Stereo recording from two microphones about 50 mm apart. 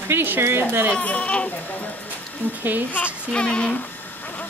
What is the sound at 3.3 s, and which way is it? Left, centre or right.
Speech, left.